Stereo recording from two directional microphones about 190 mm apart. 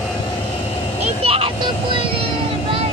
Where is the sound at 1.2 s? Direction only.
30° right (ahead or behind).